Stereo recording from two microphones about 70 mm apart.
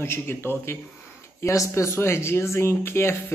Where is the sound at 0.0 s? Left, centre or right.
Left.